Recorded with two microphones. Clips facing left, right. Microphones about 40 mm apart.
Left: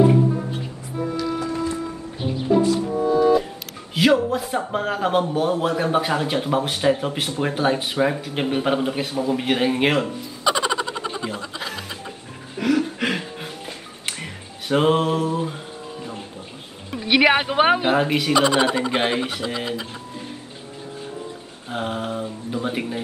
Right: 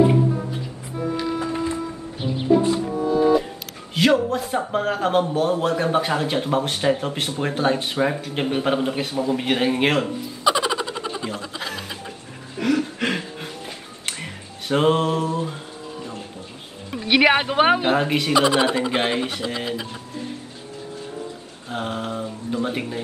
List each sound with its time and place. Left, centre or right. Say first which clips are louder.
1.1 s music: right 1 dB; right
3.9 s speech: left 1 dB; centre
12.5 s music: left 1 dB; centre
16.9 s speech: even; centre
21.6 s speech: left 1 dB; centre